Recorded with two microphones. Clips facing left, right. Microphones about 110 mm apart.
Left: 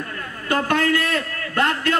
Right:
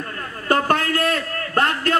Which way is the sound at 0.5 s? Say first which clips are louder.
Right 1 dB; 40° right (ahead or behind).